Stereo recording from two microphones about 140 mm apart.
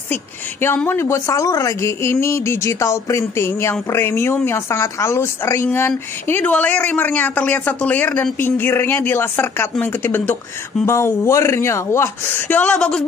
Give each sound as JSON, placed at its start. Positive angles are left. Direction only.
{"t": 0.1, "sound": "speech", "side_deg": 15}